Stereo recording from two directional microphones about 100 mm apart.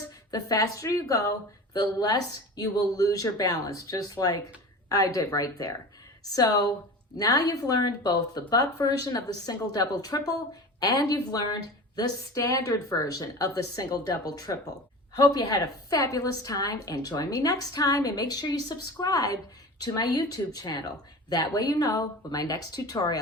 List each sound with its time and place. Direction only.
0.3 s speech: 40° left (ahead or behind)